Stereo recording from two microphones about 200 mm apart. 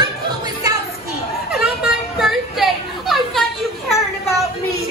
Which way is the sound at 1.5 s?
5° right (ahead or behind).